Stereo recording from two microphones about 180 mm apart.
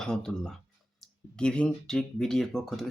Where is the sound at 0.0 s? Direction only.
5° left (ahead or behind).